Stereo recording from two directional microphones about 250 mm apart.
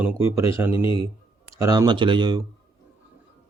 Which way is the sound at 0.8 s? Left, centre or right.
Left.